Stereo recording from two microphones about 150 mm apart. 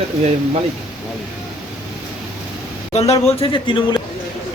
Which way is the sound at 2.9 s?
45° left (ahead or behind).